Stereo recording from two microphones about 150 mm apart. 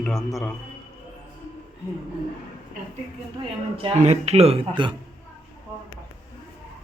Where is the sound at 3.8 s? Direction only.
40° right (ahead or behind).